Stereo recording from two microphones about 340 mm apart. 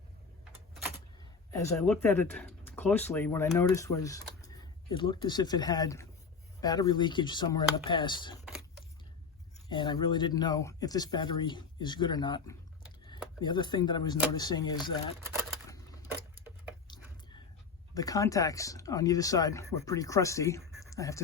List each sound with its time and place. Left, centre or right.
1.2 s speech: centre
9.6 s speech: centre
17.9 s speech: centre